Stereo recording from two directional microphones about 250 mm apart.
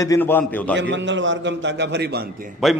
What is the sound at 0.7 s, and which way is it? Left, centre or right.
A man's voice, right.